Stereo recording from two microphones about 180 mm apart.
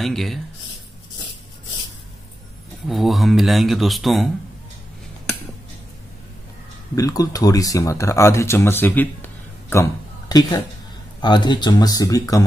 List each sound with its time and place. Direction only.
0.0 s speech: centre (ahead or behind)
2.9 s speech: centre (ahead or behind)
7.0 s speech: 20° left (ahead or behind)